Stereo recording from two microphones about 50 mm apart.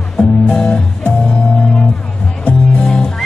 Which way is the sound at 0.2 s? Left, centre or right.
Left.